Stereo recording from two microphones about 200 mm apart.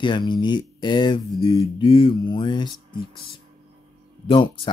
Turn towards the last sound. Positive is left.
turn(degrees=25)  # may be behind; listen again after turning